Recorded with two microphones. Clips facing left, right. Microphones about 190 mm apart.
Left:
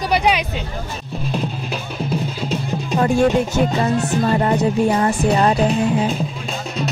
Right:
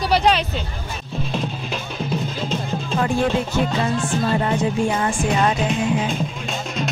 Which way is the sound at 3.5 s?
40° left (ahead or behind).